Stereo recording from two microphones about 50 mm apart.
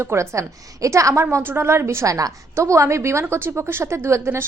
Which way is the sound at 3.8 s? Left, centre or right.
Right.